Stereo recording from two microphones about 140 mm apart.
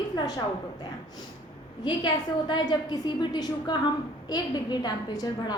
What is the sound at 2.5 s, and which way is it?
A woman's voice, 30° left (ahead or behind).